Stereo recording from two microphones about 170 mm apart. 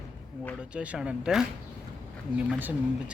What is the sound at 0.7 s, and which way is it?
Speech, 5° right (ahead or behind).